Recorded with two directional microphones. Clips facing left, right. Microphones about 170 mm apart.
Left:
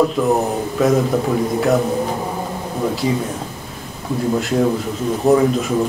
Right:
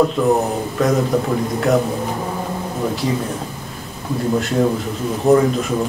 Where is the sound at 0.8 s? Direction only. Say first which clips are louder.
Left 2 dB; 5° left (ahead or behind).